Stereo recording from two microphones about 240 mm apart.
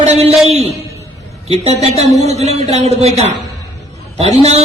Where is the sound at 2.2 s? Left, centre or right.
Right.